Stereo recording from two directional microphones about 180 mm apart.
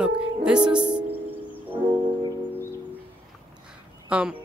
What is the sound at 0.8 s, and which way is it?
Music, 25° right (ahead or behind).